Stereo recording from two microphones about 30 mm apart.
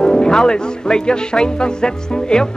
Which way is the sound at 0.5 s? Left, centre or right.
Left.